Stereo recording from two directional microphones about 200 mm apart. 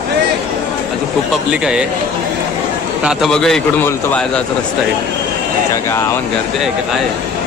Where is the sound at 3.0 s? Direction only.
Centre (ahead or behind).